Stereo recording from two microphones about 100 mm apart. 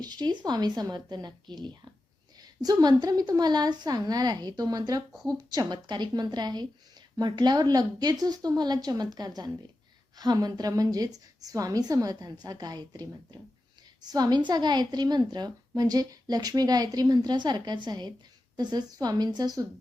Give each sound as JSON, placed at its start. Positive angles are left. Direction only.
{"t": 0.0, "sound": "a woman's voice", "side_deg": -45}